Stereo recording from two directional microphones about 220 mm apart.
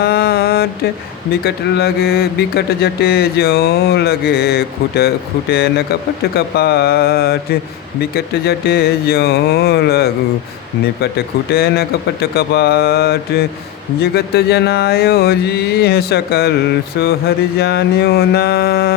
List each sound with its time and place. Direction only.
0.0 s mantra: 45° left (ahead or behind)
1.3 s speech: 45° left (ahead or behind)
11.5 s speech: 45° left (ahead or behind)